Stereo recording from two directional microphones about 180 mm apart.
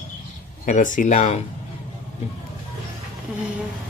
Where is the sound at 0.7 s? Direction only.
45° left (ahead or behind).